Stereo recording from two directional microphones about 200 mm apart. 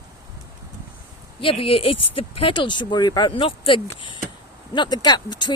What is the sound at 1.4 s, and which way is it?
Speech, 25° left (ahead or behind).